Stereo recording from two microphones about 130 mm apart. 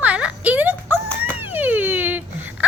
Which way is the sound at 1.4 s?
15° right (ahead or behind).